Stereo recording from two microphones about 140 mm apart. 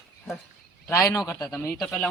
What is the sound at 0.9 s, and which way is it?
Speech, 20° left (ahead or behind).